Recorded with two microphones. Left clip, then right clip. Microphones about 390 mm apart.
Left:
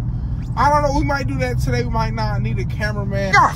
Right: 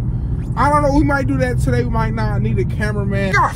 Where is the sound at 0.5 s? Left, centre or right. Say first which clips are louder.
Right 1 dB; right.